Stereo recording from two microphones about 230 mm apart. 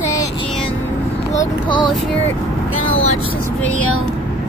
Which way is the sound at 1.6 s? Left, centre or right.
Centre.